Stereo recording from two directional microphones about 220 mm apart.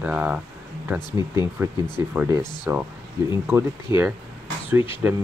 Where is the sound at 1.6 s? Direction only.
10° right (ahead or behind).